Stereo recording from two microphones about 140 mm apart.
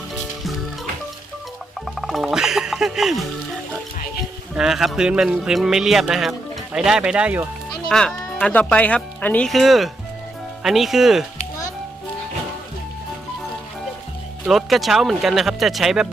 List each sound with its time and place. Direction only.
2.0 s music: centre (ahead or behind)
4.5 s speech: 5° right (ahead or behind)
7.9 s speech: 5° left (ahead or behind)
14.4 s speech: centre (ahead or behind)